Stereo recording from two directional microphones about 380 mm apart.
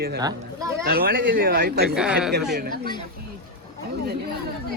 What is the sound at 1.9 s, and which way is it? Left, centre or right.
Speech, centre.